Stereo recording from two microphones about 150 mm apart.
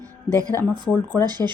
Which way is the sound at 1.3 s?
30° right (ahead or behind).